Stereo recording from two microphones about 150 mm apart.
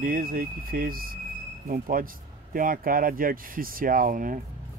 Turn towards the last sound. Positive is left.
turn(degrees=-65)  # may be behind; listen again after turning